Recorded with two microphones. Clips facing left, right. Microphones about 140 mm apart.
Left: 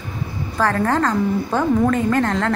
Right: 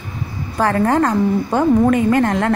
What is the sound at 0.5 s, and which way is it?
A woman's voice, 20° right (ahead or behind).